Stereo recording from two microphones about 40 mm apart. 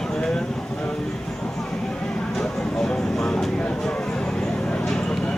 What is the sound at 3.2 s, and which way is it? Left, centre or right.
Vehicle, centre.